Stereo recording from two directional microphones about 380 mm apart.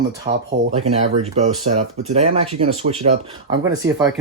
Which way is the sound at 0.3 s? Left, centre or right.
Right.